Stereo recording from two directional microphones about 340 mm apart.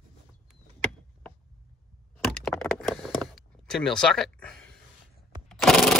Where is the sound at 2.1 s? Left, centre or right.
Centre.